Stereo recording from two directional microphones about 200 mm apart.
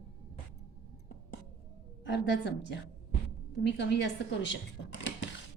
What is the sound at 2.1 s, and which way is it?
Speech, 60° left (ahead or behind).